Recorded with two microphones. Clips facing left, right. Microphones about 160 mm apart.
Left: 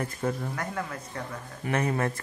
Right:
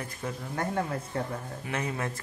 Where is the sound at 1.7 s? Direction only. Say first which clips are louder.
Left 6 dB; 55° left (ahead or behind).